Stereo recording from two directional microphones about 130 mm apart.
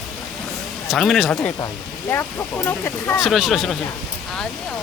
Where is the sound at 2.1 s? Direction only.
15° left (ahead or behind).